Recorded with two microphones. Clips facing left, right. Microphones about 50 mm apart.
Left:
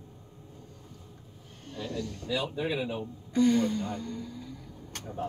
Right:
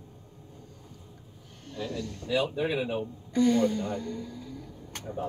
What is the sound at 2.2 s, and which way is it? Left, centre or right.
Speech, right.